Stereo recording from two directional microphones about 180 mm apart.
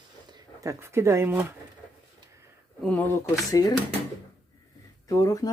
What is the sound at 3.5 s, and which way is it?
Speech, 20° left (ahead or behind).